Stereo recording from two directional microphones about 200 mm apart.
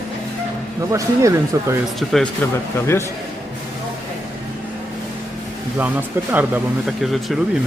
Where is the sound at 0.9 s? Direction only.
15° right (ahead or behind).